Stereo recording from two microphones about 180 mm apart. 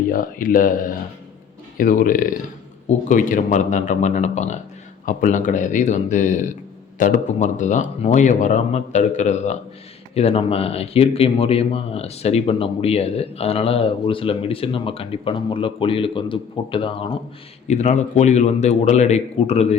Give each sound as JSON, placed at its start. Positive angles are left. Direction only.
{"t": 0.1, "sound": "speech", "side_deg": 50}
{"t": 17.7, "sound": "speech", "side_deg": 40}